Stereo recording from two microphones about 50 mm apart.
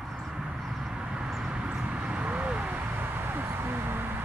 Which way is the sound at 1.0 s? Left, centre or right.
Centre.